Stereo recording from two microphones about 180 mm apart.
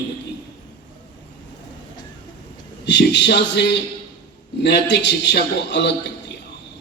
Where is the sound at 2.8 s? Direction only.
75° left (ahead or behind).